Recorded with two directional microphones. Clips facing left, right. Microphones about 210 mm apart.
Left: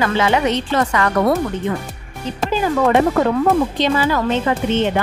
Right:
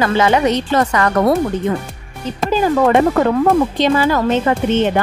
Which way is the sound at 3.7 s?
45° right (ahead or behind).